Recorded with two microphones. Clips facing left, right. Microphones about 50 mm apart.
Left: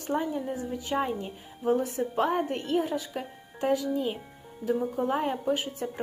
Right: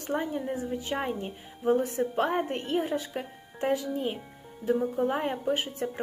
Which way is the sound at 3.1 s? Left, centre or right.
Right.